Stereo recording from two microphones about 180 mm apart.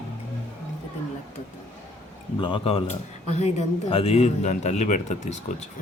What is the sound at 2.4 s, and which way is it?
Speech, 25° left (ahead or behind).